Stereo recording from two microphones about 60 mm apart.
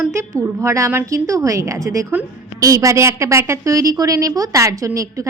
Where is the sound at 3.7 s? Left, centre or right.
Right.